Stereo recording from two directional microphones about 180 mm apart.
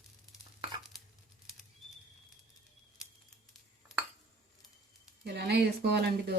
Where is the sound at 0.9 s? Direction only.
Centre (ahead or behind).